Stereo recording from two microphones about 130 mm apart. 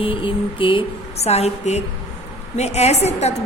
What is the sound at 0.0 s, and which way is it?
A woman's voice, 40° left (ahead or behind).